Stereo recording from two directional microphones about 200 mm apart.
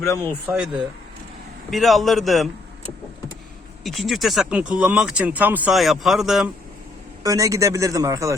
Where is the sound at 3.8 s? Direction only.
Centre (ahead or behind).